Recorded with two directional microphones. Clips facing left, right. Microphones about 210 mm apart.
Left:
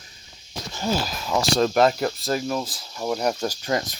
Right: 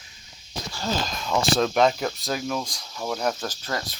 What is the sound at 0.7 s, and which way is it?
Speech, 15° left (ahead or behind).